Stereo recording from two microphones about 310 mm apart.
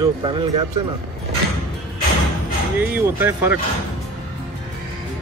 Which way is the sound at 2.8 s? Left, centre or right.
Centre.